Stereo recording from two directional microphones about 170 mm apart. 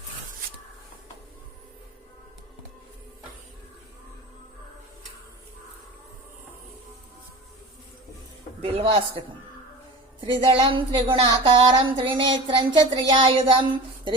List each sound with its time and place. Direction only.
8.6 s a man's voice: 35° right (ahead or behind)
10.2 s speech: 30° right (ahead or behind)